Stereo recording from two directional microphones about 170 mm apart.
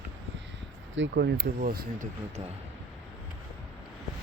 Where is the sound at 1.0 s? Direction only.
80° right; by 2.1 s 55° right (ahead or behind).